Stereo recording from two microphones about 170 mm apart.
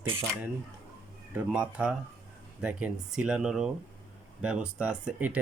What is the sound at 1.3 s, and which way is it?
Speech, 5° right (ahead or behind).